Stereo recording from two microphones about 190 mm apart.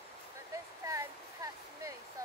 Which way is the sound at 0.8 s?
15° right (ahead or behind).